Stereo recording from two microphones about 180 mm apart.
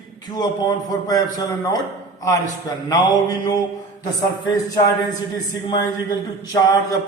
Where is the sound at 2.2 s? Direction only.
20° left (ahead or behind).